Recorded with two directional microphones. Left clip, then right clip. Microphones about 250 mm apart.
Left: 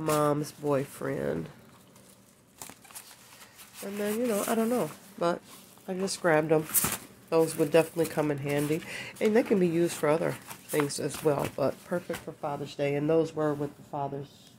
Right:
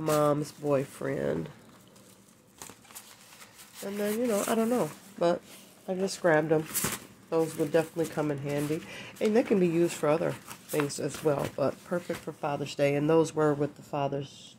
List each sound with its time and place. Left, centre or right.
0.1 s speech: centre
3.8 s speech: centre
7.2 s speech: centre
12.4 s speech: right